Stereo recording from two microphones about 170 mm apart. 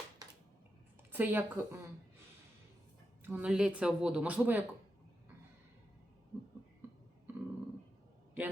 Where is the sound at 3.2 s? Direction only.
5° right (ahead or behind).